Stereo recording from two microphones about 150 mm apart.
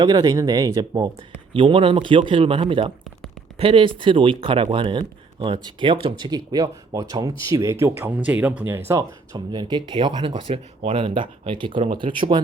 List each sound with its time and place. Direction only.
0.0 s speech: 25° right (ahead or behind)